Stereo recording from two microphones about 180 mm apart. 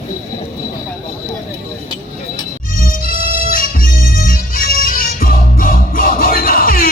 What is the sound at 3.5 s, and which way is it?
Bagpipes, 50° left (ahead or behind).